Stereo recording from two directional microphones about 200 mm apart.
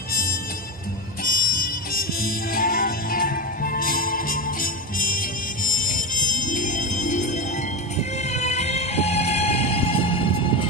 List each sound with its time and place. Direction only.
0.1 s music: 45° left (ahead or behind); by 10.7 s 25° left (ahead or behind)